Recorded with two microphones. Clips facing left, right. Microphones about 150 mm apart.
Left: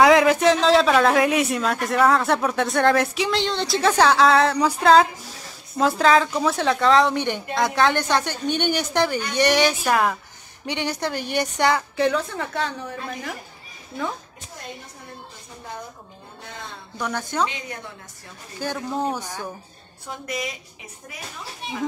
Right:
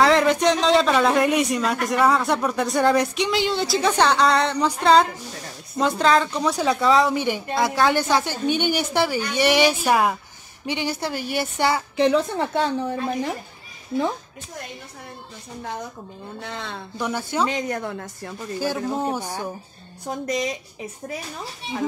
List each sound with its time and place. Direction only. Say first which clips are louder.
0.0 s speech: left 2 dB; 5° left (ahead or behind)
12.0 s a woman's voice: right 3 dB; 25° right (ahead or behind)
16.4 s speech: right 4 dB; 75° right (ahead or behind)
17.0 s speech: right 1 dB; 10° right (ahead or behind)
17.5 s a woman's voice: right 9 dB; 45° right (ahead or behind)
17.8 s a woman's voice: right 10 dB; 60° right (ahead or behind)
19.0 s speech: right 1 dB; 10° right (ahead or behind)
20.1 s speech: right 5 dB; 40° right (ahead or behind)